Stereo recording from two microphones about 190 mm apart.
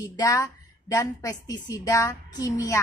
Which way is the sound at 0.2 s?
15° left (ahead or behind).